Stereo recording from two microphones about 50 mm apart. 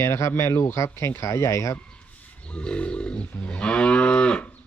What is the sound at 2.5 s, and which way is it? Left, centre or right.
Moo, left.